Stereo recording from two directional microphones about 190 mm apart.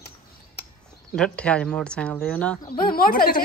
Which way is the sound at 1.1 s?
5° left (ahead or behind).